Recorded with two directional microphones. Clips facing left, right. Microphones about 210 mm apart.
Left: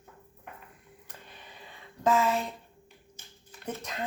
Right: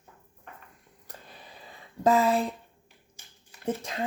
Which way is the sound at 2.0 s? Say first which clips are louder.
Right 3 dB; 35° right (ahead or behind).